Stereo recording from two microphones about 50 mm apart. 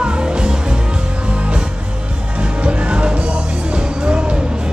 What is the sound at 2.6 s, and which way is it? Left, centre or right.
Music, right.